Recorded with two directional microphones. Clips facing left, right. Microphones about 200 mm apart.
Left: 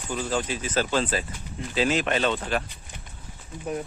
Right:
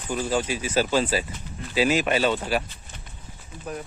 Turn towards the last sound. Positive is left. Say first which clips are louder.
# left 3 dB
turn(degrees=25)  # may be behind; listen again after turning